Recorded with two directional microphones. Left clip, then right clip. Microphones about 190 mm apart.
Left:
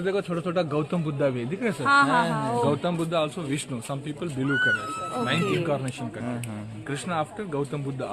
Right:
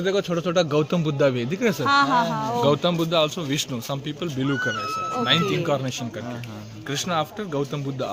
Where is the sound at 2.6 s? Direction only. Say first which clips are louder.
Right 5 dB; 60° right (ahead or behind).